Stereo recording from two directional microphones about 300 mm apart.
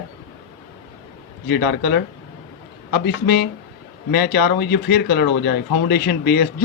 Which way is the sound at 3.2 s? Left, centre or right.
Left.